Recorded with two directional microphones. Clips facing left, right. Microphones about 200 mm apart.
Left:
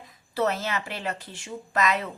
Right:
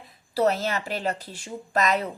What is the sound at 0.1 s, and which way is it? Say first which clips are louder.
Speech: right 3 dB; 35° right (ahead or behind).